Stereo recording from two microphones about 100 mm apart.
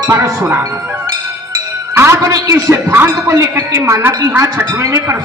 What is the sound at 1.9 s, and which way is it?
A man's voice, 25° right (ahead or behind).